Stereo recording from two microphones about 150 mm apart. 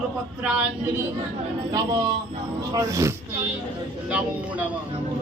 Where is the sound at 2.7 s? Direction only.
20° right (ahead or behind).